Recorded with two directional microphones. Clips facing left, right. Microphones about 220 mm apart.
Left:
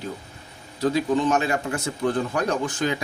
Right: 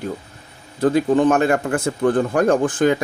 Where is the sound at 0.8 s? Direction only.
55° right (ahead or behind).